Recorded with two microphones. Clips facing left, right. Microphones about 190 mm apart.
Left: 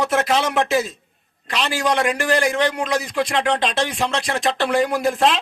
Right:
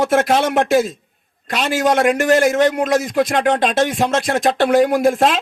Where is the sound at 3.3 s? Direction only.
50° right (ahead or behind).